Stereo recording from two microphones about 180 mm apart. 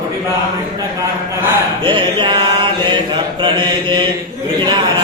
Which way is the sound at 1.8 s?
30° right (ahead or behind).